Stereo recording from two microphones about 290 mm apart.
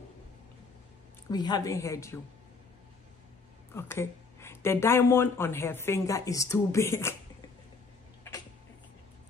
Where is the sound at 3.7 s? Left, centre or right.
Centre.